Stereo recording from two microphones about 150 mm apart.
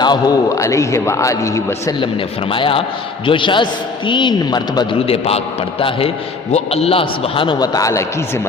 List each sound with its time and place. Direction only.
0.0 s a man's voice: 30° left (ahead or behind)
2.5 s a man's voice: 35° left (ahead or behind)
6.5 s a man's voice: 45° left (ahead or behind); by 8.0 s 20° left (ahead or behind)